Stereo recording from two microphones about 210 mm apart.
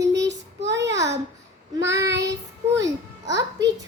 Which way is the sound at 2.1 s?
55° right (ahead or behind).